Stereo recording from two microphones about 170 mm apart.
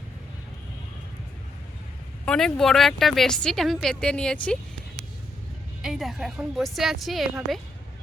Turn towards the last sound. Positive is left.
turn(degrees=0)  # may be behind; listen again after turning